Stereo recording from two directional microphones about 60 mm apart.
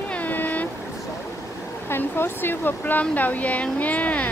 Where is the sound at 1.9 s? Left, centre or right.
Left.